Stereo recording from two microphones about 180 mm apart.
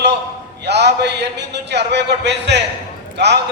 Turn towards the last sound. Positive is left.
turn(degrees=-70)  # may be behind; listen again after turning